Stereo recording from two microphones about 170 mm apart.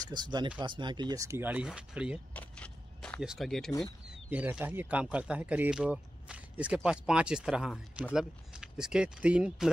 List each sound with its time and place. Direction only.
0.0 s speech: 25° right (ahead or behind); by 2.1 s 5° right (ahead or behind)
2.3 s a sound: 5° left (ahead or behind)
3.2 s speech: centre (ahead or behind)
4.3 s speech: 10° right (ahead or behind)